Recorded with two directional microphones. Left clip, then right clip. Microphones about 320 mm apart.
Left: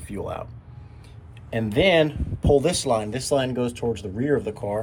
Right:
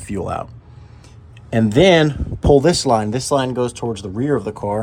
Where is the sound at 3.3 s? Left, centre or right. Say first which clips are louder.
Right 5 dB; right.